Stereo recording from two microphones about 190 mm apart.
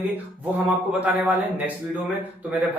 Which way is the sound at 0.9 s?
10° right (ahead or behind).